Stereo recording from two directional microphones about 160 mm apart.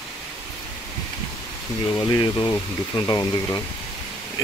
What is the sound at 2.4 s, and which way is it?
Speech, 20° left (ahead or behind).